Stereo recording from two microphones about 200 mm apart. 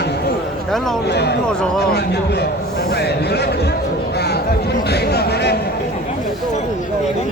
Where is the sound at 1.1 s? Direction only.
55° left (ahead or behind).